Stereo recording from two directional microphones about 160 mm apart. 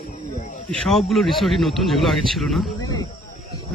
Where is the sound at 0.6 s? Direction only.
Centre (ahead or behind).